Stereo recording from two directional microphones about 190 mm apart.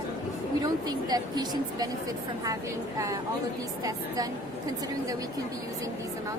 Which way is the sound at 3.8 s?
20° right (ahead or behind).